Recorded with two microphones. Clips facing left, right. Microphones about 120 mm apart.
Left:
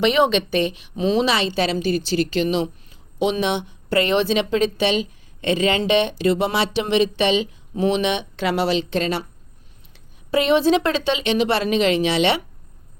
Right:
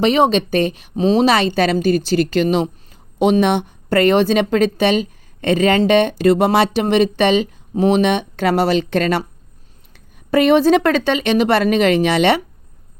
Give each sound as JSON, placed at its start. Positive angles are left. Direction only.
{"t": 0.0, "sound": "a woman's voice", "side_deg": -35}